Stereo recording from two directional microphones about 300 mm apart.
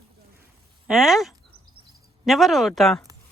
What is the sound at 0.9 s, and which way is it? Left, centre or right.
Speech, centre.